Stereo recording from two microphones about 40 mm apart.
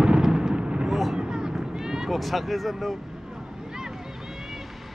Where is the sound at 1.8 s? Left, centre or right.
Centre.